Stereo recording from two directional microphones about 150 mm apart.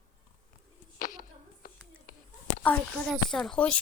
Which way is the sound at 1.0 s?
60° left (ahead or behind).